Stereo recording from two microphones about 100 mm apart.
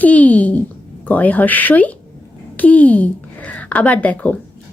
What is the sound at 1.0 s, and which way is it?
A woman's voice, 15° left (ahead or behind).